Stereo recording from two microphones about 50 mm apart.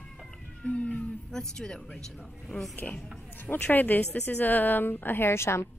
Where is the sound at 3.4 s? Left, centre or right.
Left.